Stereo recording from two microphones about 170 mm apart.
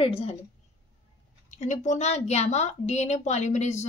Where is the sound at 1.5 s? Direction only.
45° left (ahead or behind).